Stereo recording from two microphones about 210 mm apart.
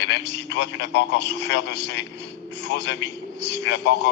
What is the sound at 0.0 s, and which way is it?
A man's voice, 55° left (ahead or behind).